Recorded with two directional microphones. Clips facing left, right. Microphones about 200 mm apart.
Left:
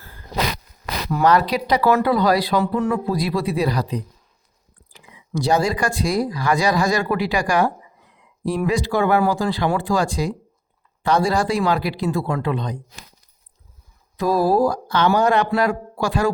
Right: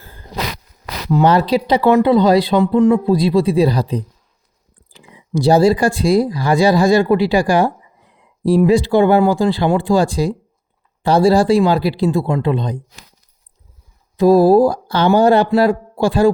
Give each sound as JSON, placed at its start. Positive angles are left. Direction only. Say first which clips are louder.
{"t": 1.1, "sound": "speech", "louder": "right 4 dB", "side_deg": -30}
{"t": 14.2, "sound": "speech", "louder": "right 8 dB", "side_deg": -30}